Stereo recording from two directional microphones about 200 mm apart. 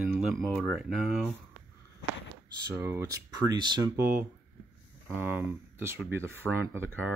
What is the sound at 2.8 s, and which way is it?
Speech, 10° right (ahead or behind).